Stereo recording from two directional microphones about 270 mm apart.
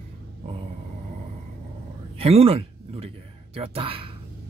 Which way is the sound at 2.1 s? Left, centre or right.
Right.